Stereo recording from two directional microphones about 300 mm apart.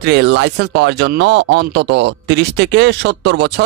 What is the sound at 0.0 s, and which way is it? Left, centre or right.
Speech, right.